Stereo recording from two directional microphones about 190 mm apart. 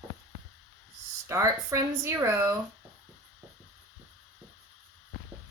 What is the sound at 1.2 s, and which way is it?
Speech, 15° right (ahead or behind).